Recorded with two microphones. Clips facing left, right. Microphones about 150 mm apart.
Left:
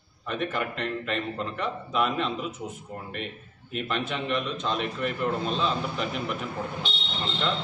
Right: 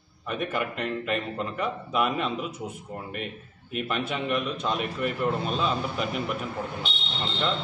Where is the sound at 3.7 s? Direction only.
10° right (ahead or behind).